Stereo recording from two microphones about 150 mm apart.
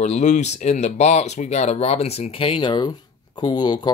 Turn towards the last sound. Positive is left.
turn(degrees=30)  # may be behind; listen again after turning